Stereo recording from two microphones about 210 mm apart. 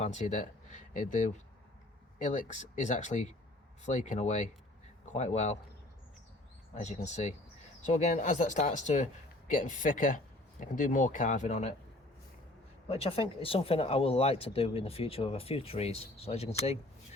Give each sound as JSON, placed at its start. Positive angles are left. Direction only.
{"t": 0.0, "sound": "speech", "side_deg": 35}
{"t": 6.7, "sound": "speech", "side_deg": 35}
{"t": 12.9, "sound": "speech", "side_deg": 25}